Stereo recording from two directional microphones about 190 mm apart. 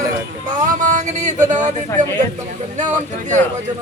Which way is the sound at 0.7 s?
40° right (ahead or behind).